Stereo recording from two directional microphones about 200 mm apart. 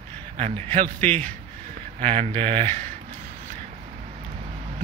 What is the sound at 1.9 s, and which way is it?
Speech, 35° right (ahead or behind).